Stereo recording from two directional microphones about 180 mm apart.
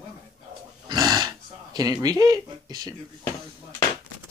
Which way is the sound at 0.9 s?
20° right (ahead or behind).